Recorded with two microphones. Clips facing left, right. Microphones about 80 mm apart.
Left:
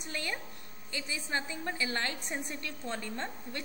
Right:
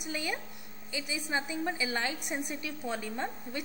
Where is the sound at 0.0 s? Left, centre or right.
Centre.